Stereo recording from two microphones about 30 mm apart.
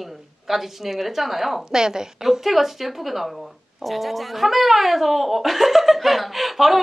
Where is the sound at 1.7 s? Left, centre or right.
Centre.